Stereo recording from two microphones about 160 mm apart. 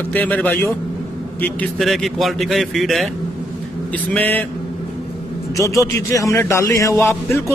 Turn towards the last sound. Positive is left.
turn(degrees=15)  # may be behind; listen again after turning